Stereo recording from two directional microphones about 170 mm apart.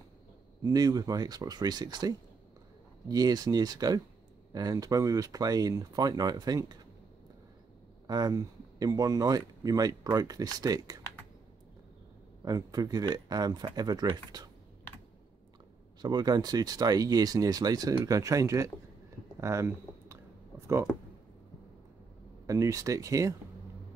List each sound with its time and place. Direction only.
0.6 s speech: 20° right (ahead or behind)
8.1 s speech: 20° right (ahead or behind)
12.4 s speech: 20° right (ahead or behind)
16.0 s speech: 25° right (ahead or behind)
19.4 s a sound: 15° right (ahead or behind)
22.5 s speech: 20° right (ahead or behind)